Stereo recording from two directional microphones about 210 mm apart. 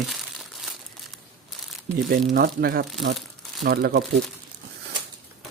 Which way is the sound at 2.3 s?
45° right (ahead or behind).